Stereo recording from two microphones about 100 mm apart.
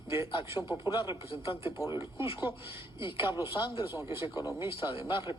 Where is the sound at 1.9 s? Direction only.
25° right (ahead or behind).